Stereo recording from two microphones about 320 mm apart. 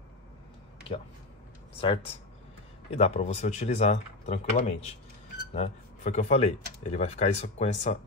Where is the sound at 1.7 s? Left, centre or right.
Centre.